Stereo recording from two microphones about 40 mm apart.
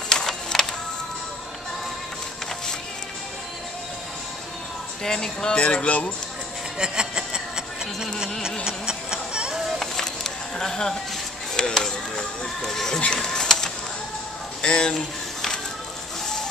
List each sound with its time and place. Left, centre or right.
0.1 s music: centre
5.0 s speech: centre
5.6 s speech: left
6.8 s a sound: centre
8.6 s music: centre
9.7 s music: centre
11.5 s speech: centre
13.0 s a sound: left
14.6 s speech: left